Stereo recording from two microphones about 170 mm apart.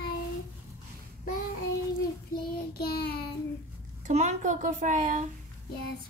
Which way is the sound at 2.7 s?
70° left (ahead or behind).